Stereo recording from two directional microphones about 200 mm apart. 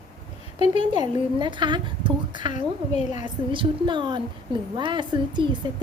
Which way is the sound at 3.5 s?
25° right (ahead or behind).